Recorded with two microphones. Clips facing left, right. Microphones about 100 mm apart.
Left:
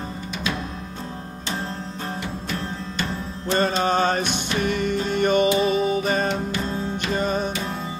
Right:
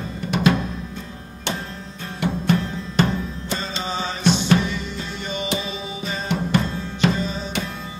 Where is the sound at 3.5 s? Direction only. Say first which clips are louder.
Left 9 dB; 55° left (ahead or behind).